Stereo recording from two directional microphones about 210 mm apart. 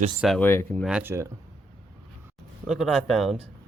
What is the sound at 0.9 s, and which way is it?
Speech, 5° right (ahead or behind).